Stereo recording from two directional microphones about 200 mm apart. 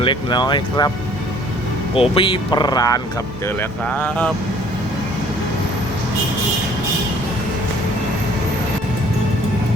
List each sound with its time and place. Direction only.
0.0 s speech: 25° left (ahead or behind)
2.0 s speech: 25° left (ahead or behind)
3.6 s speech: 5° left (ahead or behind)